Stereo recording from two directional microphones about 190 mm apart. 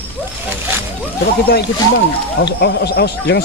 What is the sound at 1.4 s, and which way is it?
Speech, 60° left (ahead or behind).